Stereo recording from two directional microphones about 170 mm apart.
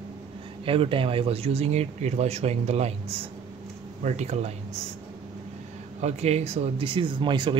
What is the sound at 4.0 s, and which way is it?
Speech, 45° right (ahead or behind).